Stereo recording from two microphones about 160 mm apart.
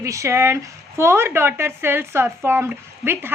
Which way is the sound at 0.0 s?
20° right (ahead or behind).